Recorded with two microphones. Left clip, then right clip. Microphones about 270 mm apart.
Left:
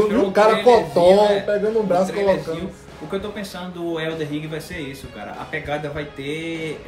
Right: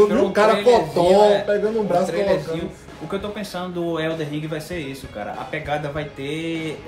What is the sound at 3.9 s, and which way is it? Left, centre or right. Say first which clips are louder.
Mantra: right 1 dB; centre.